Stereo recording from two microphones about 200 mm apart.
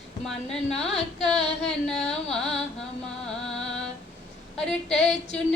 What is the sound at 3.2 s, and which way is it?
Music, 5° left (ahead or behind).